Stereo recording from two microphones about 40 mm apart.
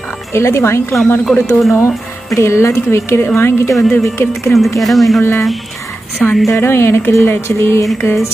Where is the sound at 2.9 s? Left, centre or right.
Left.